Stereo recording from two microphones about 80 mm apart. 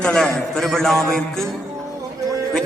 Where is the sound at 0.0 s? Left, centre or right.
Centre.